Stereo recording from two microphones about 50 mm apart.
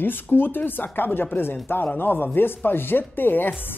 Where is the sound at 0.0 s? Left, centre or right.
Left.